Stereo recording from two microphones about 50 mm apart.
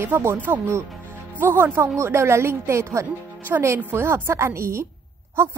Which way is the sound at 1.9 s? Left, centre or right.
Right.